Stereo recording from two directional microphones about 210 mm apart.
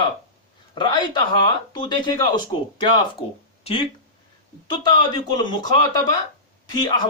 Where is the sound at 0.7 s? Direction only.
20° left (ahead or behind).